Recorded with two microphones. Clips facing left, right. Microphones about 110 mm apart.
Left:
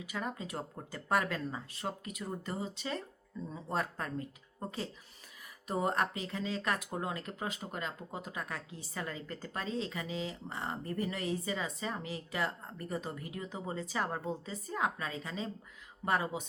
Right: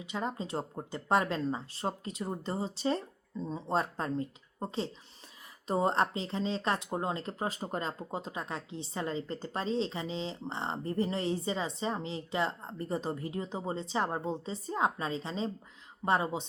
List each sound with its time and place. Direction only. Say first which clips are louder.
0.0 s speech: right 3 dB; 25° right (ahead or behind)